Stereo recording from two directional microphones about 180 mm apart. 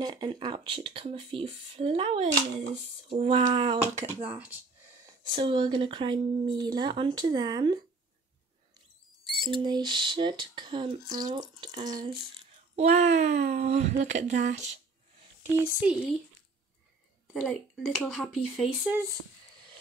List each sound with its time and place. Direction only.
0.0 s speech: 25° right (ahead or behind)
9.4 s speech: 25° right (ahead or behind)
12.7 s speech: 40° right (ahead or behind)
17.3 s speech: 5° left (ahead or behind)